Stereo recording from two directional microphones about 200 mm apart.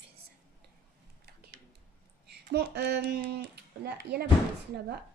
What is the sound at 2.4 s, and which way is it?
A child's voice, 55° right (ahead or behind).